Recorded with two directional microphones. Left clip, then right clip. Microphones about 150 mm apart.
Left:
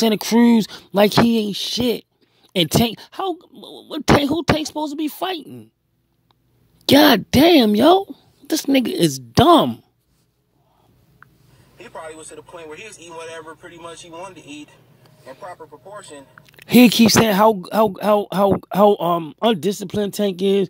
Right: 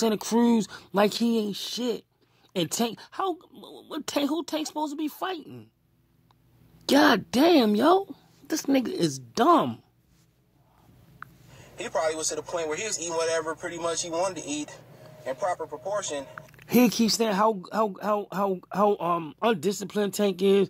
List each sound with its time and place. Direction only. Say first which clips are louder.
0.0 s speech: left 8 dB; 40° left (ahead or behind)
6.9 s speech: left 8 dB; 40° left (ahead or behind)
11.1 s a man's voice: right 5 dB; 45° right (ahead or behind)
15.2 s speech: right 7 dB; 40° right (ahead or behind)
16.5 s speech: left 10 dB; 50° left (ahead or behind); by 20.6 s 30° left (ahead or behind)